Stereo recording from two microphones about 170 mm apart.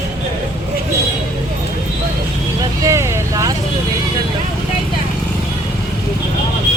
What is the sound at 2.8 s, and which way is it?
Vehicle, 15° right (ahead or behind).